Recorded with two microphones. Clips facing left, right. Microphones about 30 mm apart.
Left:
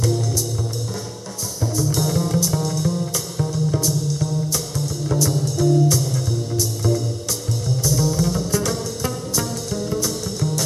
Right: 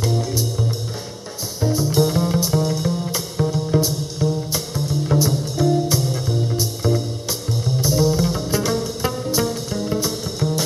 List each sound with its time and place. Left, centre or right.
0.0 s music: right